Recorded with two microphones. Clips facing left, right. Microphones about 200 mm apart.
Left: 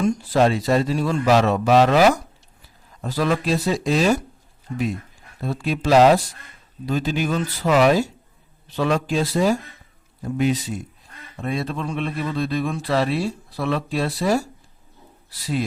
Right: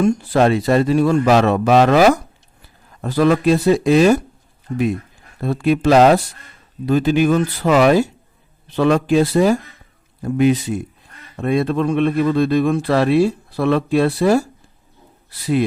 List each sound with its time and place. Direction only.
0.0 s speech: 55° right (ahead or behind)
5.4 s speech: 60° right (ahead or behind)